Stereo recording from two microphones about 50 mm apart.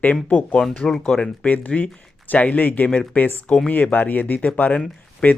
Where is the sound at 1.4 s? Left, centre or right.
Left.